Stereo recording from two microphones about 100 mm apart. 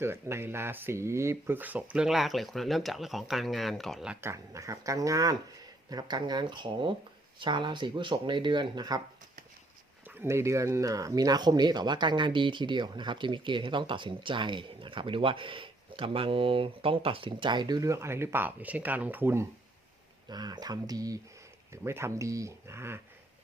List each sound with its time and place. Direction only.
0.0 s speech: 25° right (ahead or behind)
2.0 s speech: centre (ahead or behind)
4.2 s speech: 30° right (ahead or behind)
10.2 s speech: 25° right (ahead or behind)
20.2 s speech: 45° right (ahead or behind)
21.7 s speech: 25° right (ahead or behind)